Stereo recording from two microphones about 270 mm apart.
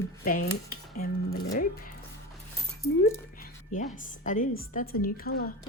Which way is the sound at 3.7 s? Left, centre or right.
Left.